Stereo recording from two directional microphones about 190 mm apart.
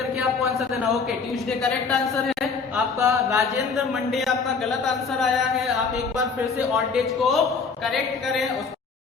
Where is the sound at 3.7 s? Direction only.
Centre (ahead or behind).